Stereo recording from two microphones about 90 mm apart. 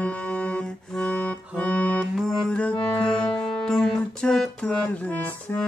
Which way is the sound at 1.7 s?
15° left (ahead or behind).